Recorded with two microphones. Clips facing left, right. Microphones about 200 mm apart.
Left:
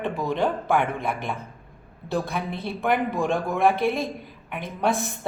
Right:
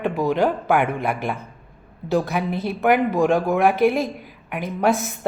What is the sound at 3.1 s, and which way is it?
Speech, 70° right (ahead or behind).